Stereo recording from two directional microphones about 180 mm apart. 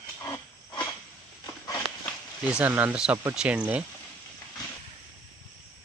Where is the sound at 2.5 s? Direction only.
10° right (ahead or behind).